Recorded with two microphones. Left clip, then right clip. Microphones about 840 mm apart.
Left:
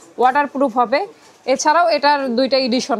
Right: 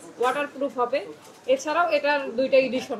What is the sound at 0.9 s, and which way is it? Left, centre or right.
A woman's voice, left.